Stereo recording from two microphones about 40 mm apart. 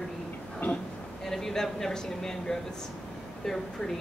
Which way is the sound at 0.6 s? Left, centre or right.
Left.